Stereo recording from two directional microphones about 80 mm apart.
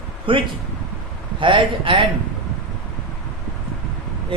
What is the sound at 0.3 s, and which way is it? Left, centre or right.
Speech, right.